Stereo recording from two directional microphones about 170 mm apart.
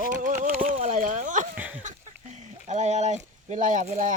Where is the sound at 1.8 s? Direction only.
45° right (ahead or behind).